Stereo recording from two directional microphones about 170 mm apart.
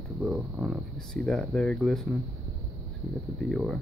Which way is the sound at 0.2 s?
10° right (ahead or behind).